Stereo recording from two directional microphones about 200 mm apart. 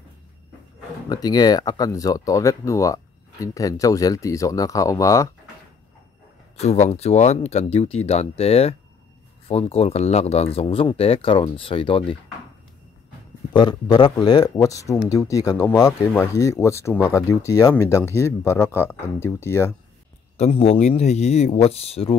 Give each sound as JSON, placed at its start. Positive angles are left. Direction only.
{"t": 1.0, "sound": "speech", "side_deg": 20}
{"t": 6.6, "sound": "speech", "side_deg": 35}
{"t": 13.5, "sound": "speech", "side_deg": 20}
{"t": 20.3, "sound": "speech", "side_deg": 30}